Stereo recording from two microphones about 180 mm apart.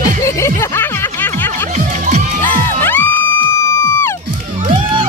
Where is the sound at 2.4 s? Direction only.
10° left (ahead or behind).